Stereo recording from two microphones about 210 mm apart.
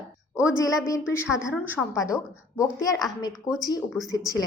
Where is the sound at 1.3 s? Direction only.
5° right (ahead or behind).